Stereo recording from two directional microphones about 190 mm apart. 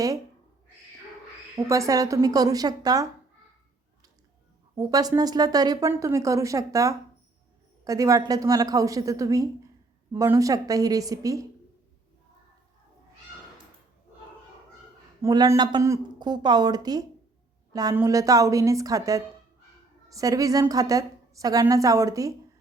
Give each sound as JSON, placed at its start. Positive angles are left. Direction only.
{"t": 1.5, "sound": "speech", "side_deg": -15}
{"t": 4.7, "sound": "speech", "side_deg": -20}
{"t": 15.2, "sound": "a woman's voice", "side_deg": -20}